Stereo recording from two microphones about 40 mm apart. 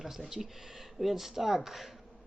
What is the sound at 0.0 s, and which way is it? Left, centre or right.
Speech, centre.